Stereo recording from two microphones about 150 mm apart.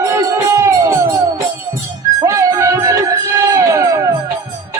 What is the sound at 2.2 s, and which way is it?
Music, 20° right (ahead or behind).